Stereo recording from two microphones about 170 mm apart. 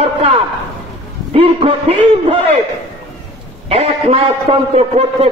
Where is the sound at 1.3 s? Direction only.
35° right (ahead or behind).